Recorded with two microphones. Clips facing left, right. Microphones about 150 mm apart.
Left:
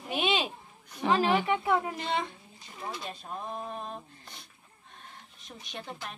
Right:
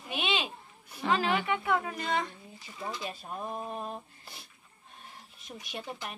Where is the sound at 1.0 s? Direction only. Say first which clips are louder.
Left 3 dB; 25° left (ahead or behind).